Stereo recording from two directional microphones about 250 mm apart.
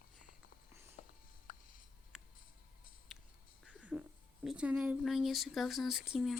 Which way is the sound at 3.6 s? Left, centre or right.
Centre.